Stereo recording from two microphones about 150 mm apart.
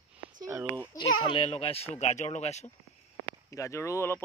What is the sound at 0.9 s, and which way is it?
Speech, 35° left (ahead or behind).